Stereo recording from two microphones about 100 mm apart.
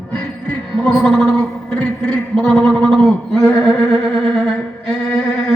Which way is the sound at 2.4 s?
10° left (ahead or behind).